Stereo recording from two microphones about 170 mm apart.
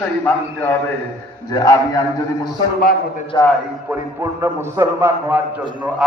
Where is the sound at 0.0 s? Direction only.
10° left (ahead or behind).